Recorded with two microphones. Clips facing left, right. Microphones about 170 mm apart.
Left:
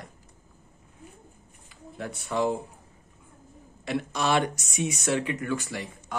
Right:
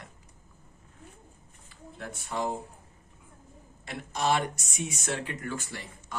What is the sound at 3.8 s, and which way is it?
Speech, 80° left.